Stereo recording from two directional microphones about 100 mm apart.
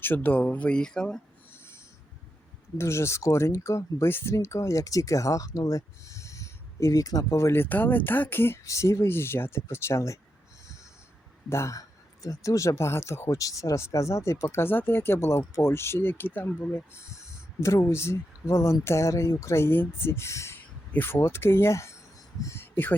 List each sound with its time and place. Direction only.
0.0 s speech: 20° left (ahead or behind)
1.5 s a sound: 25° left (ahead or behind)
2.7 s speech: 25° left (ahead or behind)
11.4 s speech: 30° left (ahead or behind)